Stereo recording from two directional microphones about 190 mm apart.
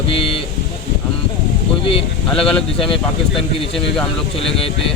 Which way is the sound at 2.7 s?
30° left (ahead or behind).